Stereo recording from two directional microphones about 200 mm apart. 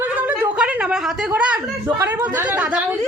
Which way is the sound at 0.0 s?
10° right (ahead or behind).